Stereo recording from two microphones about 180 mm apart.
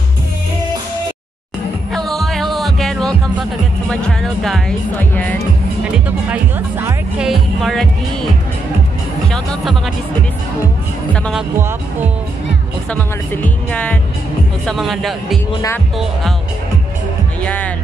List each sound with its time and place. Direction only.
1.9 s music: centre (ahead or behind)
3.9 s speech: centre (ahead or behind)
5.9 s speech: 10° right (ahead or behind)
7.2 s speech: centre (ahead or behind)
9.3 s speech: 5° left (ahead or behind)
12.9 s speech: 10° left (ahead or behind)
17.4 s speech: 5° left (ahead or behind)